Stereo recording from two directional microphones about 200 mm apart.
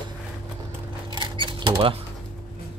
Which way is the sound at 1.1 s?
25° right (ahead or behind).